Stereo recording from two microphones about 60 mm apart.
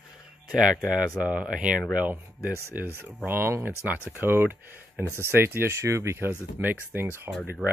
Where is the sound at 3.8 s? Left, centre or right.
Right.